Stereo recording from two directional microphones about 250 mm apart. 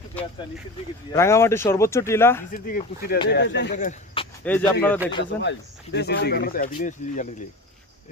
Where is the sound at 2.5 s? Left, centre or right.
Left.